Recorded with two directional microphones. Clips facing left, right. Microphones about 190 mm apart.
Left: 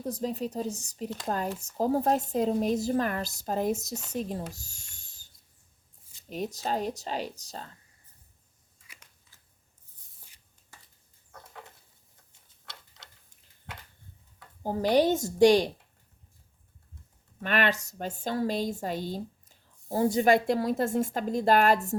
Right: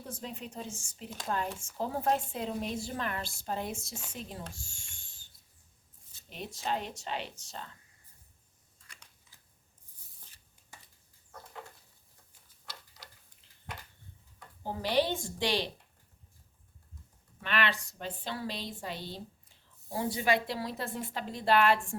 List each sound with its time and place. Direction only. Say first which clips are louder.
0.0 s a woman's voice: left 10 dB; 40° left (ahead or behind)
4.5 s a sound: even; 40° left (ahead or behind)
6.3 s a woman's voice: left 5 dB; 40° left (ahead or behind)
14.6 s a woman's voice: left 6 dB; 45° left (ahead or behind)
17.4 s a woman's voice: left 5 dB; 45° left (ahead or behind)